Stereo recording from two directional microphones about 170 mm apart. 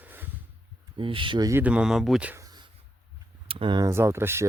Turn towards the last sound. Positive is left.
turn(degrees=-15)  # may be behind; listen again after turning